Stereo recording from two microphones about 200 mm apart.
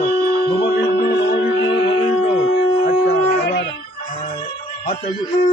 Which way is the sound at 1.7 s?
25° left (ahead or behind).